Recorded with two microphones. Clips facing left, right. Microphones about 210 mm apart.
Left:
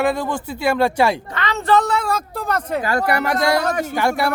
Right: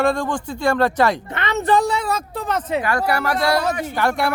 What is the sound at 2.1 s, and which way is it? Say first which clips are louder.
Speech: left 1 dB; centre (ahead or behind).